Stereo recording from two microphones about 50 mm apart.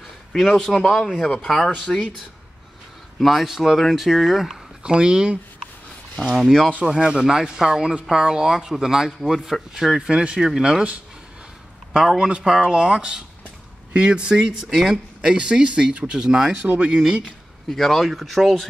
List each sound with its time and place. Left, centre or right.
0.3 s speech: centre
1.9 s speech: left
3.2 s speech: centre
4.8 s speech: centre
6.8 s speech: centre
14.7 s speech: centre
15.2 s speech: centre
16.6 s speech: right
17.6 s speech: centre